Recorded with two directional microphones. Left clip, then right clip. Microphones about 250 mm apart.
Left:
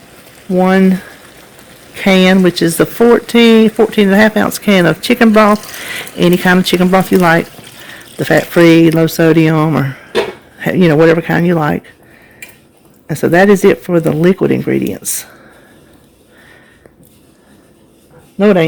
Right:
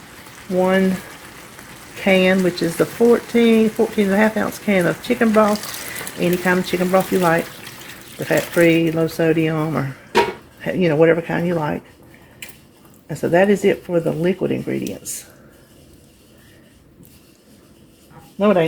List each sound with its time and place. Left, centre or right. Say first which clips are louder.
0.6 s speech: left 6 dB; left
2.0 s speech: left 6 dB; left
13.1 s speech: left 7 dB; left
18.3 s speech: left 6 dB; left